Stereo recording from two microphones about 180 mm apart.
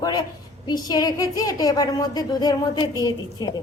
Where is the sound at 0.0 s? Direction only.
20° left (ahead or behind).